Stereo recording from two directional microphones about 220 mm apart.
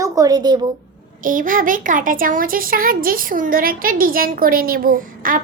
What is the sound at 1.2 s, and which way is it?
Speech, 40° right (ahead or behind).